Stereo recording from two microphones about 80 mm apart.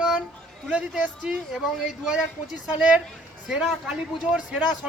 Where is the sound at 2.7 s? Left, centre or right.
Centre.